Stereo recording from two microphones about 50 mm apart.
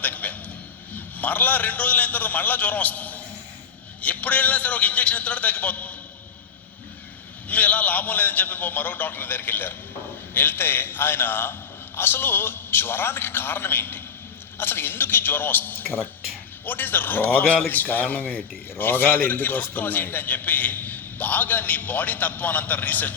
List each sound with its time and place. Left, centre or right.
0.0 s a sound: left
0.9 s a man's voice: left
7.4 s a man's voice: left